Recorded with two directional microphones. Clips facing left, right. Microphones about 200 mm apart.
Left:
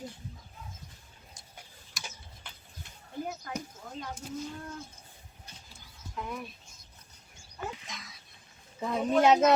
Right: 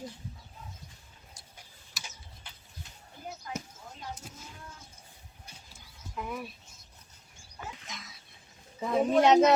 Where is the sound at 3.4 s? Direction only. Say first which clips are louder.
Left 1 dB; 60° left (ahead or behind).